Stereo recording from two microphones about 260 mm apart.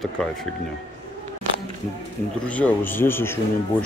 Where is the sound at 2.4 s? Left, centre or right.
Centre.